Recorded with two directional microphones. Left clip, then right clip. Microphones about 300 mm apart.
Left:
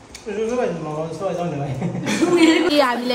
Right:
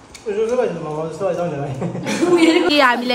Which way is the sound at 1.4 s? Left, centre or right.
Right.